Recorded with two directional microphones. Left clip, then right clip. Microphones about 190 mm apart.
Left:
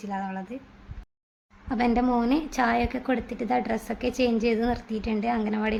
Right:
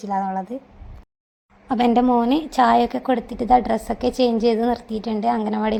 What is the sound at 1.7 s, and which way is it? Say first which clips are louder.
A woman's voice: right 7 dB; 25° right (ahead or behind).